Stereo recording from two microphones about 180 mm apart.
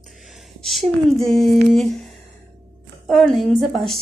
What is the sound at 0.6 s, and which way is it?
A woman's voice, centre (ahead or behind).